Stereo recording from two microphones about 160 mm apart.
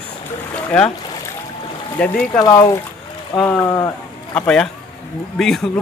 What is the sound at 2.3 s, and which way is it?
Speech, 25° left (ahead or behind).